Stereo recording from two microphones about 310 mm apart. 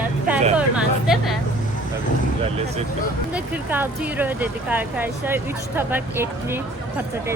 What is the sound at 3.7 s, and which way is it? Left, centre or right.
Speech, centre.